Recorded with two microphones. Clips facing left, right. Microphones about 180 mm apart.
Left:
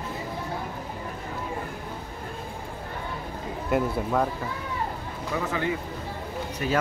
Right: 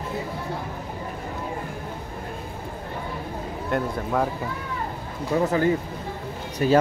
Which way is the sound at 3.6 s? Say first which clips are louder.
Left 1 dB; 5° left (ahead or behind).